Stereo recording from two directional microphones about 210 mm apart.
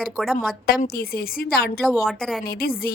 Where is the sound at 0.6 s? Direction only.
45° left (ahead or behind).